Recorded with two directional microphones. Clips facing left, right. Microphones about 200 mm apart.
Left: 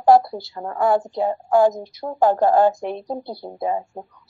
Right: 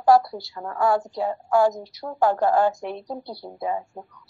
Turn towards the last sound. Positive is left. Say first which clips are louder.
# left 4 dB
turn(degrees=30)  # may be behind; listen again after turning